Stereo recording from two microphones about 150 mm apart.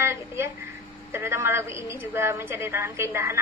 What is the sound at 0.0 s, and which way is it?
A woman's voice, 15° right (ahead or behind).